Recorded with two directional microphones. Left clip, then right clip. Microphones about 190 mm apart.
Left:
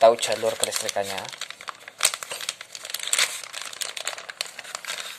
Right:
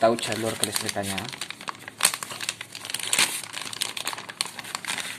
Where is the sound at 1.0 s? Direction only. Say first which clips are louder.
Left 2 dB; centre (ahead or behind).